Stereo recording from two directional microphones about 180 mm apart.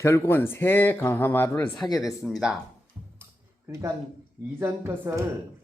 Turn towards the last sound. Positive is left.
turn(degrees=-15)  # may be behind; listen again after turning